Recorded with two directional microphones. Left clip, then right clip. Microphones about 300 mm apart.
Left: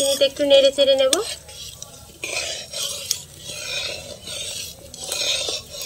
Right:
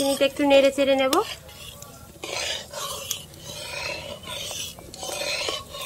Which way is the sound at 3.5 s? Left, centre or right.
Centre.